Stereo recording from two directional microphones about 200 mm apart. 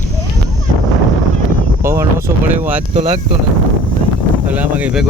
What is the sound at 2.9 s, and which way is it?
Speech, 35° right (ahead or behind).